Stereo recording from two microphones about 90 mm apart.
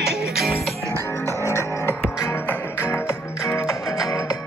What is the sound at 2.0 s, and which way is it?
Music, 15° left (ahead or behind).